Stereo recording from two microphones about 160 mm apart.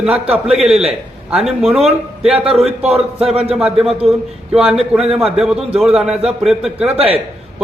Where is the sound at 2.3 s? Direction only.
40° right (ahead or behind).